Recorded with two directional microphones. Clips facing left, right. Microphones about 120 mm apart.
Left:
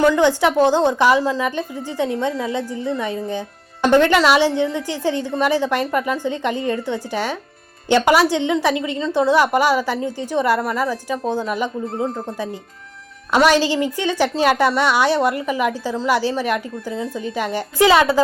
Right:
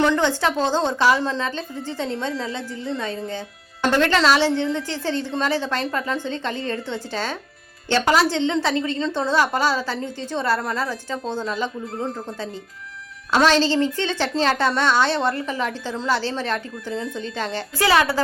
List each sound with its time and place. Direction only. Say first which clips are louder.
0.0 s a woman's voice: left 4 dB; 10° left (ahead or behind)
13.3 s a woman's voice: left 2 dB; 15° left (ahead or behind)